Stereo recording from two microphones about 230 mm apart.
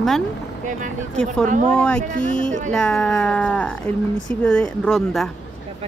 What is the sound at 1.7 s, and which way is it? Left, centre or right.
Speech, centre.